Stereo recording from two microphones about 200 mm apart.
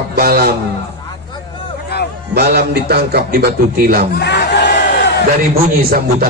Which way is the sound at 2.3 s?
55° right (ahead or behind).